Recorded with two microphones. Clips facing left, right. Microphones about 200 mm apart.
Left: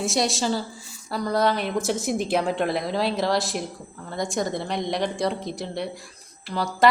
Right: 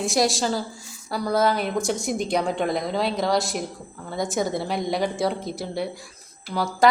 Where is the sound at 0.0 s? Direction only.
Centre (ahead or behind).